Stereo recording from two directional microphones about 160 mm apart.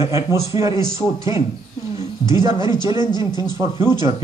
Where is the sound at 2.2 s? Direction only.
20° right (ahead or behind).